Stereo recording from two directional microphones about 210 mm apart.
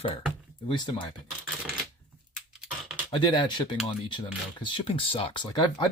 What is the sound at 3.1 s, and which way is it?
Speech, 25° left (ahead or behind).